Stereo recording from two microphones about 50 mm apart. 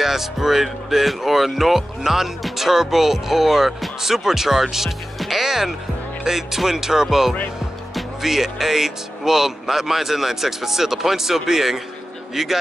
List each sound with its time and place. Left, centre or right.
0.0 s speech: centre